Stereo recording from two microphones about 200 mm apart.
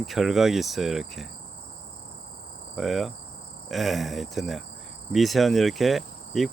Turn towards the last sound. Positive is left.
turn(degrees=0)  # may be behind; listen again after turning